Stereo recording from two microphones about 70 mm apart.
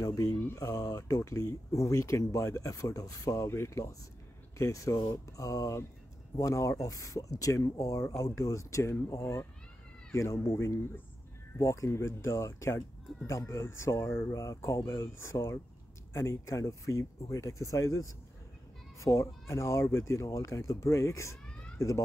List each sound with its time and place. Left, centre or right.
0.0 s speech: left
9.2 s speech: left